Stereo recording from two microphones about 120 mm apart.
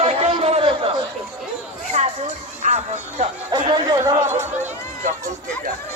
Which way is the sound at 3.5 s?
40° right (ahead or behind).